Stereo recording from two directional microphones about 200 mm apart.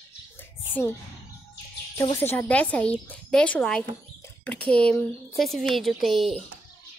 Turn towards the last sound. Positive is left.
turn(degrees=0)  # may be behind; listen again after turning